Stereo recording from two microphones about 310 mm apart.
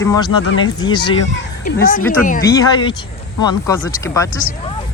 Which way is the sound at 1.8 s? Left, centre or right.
Left.